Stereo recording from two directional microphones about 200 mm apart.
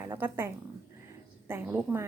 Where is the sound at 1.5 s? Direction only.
10° right (ahead or behind).